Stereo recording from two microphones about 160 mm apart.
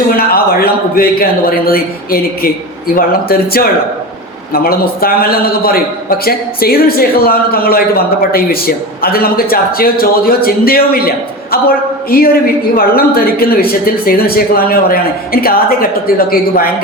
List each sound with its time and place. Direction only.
0.2 s a man's voice: 70° left (ahead or behind)
12.1 s a man's voice: 70° left (ahead or behind)